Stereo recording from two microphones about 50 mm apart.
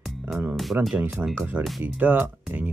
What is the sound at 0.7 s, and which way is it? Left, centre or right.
Speech, right.